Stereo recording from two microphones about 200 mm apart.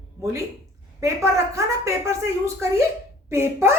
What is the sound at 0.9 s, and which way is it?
A woman's voice, 15° right (ahead or behind).